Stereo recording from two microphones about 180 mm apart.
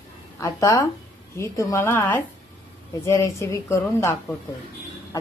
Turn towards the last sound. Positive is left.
turn(degrees=15)  # may be behind; listen again after turning